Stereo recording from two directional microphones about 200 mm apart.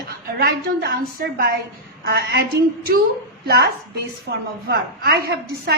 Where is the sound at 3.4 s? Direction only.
55° right (ahead or behind).